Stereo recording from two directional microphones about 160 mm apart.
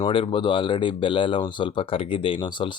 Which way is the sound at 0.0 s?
35° left (ahead or behind).